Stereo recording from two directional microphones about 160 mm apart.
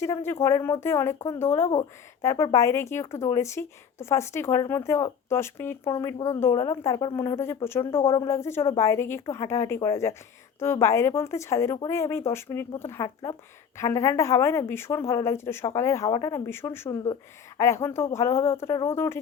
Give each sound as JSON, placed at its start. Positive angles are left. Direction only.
{"t": 0.0, "sound": "a woman's voice", "side_deg": 15}